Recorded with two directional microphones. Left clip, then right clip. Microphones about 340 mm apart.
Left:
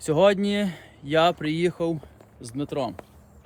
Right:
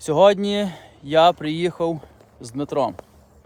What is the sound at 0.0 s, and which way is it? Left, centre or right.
Speech, centre.